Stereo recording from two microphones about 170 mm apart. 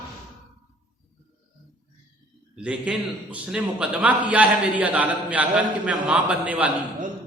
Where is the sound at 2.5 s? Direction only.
5° right (ahead or behind).